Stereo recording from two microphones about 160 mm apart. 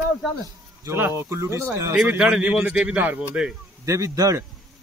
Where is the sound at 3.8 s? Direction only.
20° right (ahead or behind).